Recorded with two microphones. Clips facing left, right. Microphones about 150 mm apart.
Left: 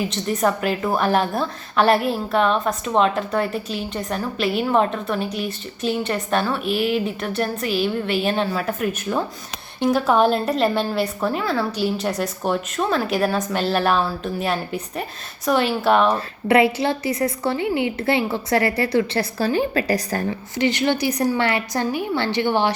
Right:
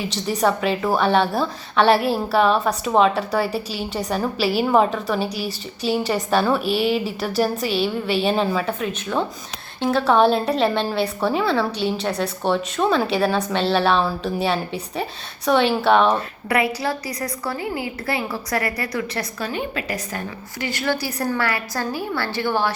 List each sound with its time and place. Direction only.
0.0 s a woman's voice: centre (ahead or behind)
6.3 s a woman's voice: centre (ahead or behind)
16.5 s a woman's voice: 25° left (ahead or behind)
20.6 s a woman's voice: 20° left (ahead or behind)